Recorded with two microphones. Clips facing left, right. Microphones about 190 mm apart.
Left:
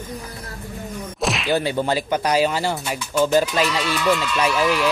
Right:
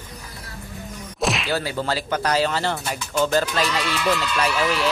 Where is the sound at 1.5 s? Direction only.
20° left (ahead or behind).